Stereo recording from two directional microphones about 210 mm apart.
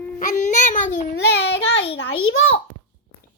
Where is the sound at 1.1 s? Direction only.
55° left (ahead or behind).